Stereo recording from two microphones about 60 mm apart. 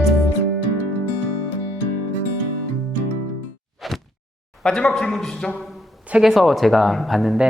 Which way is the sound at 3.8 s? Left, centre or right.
Centre.